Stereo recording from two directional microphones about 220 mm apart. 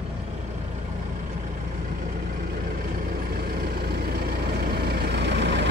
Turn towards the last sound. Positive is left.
turn(degrees=-50)  # may be behind; listen again after turning